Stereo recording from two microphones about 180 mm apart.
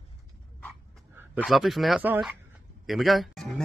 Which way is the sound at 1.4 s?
Centre (ahead or behind).